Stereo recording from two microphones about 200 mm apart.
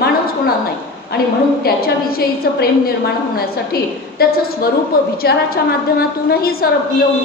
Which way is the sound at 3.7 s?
50° left (ahead or behind).